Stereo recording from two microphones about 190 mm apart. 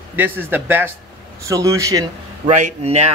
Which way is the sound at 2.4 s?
35° right (ahead or behind).